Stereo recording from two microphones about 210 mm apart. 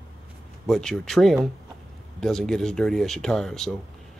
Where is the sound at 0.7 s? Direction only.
Centre (ahead or behind).